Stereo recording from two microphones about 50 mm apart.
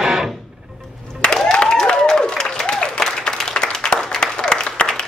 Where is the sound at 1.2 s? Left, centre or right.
Centre.